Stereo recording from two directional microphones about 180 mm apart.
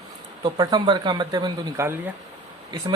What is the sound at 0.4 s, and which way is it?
Speech, 25° right (ahead or behind).